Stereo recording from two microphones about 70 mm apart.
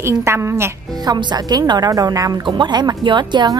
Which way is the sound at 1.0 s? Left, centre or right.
Right.